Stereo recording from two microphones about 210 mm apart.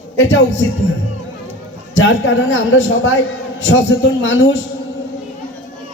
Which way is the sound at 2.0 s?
65° left (ahead or behind).